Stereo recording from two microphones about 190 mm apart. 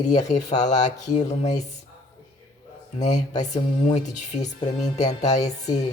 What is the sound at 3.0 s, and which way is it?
Speech, 40° left (ahead or behind).